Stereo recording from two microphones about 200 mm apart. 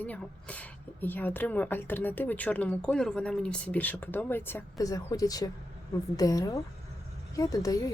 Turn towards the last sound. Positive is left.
turn(degrees=15)  # may be behind; listen again after turning